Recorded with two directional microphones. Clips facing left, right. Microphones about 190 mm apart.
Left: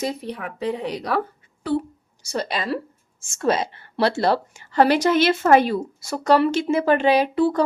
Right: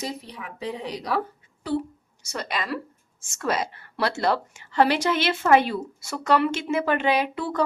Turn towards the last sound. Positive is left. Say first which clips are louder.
# left 7 dB
turn(degrees=35)  # may be behind; listen again after turning